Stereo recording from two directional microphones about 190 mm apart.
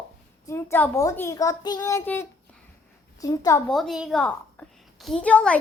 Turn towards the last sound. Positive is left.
turn(degrees=5)  # may be behind; listen again after turning